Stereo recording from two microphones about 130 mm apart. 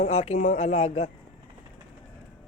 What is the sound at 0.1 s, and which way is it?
Speech, 60° left (ahead or behind).